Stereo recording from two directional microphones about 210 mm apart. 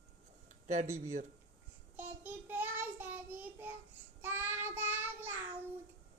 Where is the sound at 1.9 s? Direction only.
10° right (ahead or behind).